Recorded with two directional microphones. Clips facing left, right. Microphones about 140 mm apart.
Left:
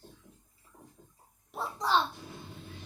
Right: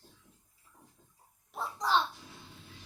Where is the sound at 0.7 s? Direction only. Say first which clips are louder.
Left 6 dB; 50° left (ahead or behind).